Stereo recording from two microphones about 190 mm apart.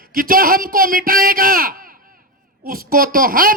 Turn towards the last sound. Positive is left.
turn(degrees=-50)  # may be behind; listen again after turning